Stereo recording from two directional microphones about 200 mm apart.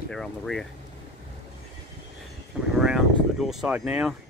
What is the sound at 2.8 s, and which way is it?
Speech, centre (ahead or behind).